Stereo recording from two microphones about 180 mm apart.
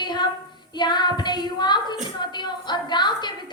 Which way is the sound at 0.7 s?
25° left (ahead or behind).